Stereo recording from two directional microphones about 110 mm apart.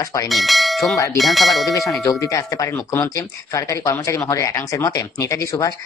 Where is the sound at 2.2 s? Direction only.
30° left (ahead or behind).